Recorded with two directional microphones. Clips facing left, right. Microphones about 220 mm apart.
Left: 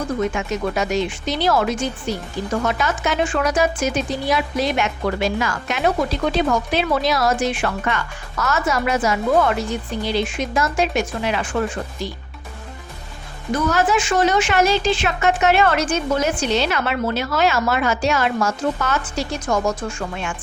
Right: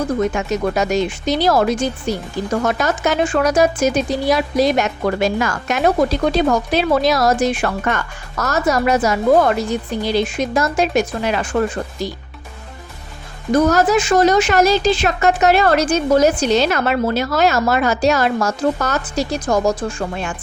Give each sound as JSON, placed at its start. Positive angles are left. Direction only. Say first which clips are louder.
{"t": 0.3, "sound": "speech", "louder": "right 4 dB", "side_deg": -40}
{"t": 13.5, "sound": "speech", "louder": "right 5 dB", "side_deg": -40}